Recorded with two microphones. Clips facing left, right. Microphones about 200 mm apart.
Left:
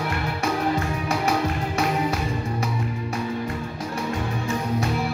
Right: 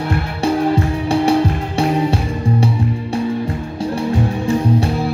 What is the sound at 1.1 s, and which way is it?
Music, 30° right (ahead or behind).